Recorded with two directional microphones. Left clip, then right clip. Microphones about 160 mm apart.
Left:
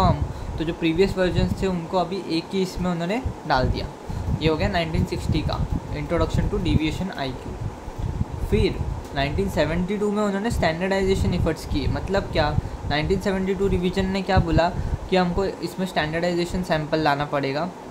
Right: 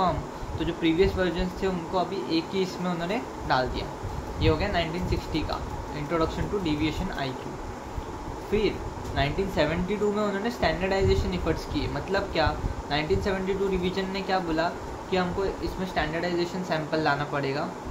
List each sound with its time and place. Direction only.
0.6 s speech: 45° left (ahead or behind)
8.5 s speech: 40° left (ahead or behind)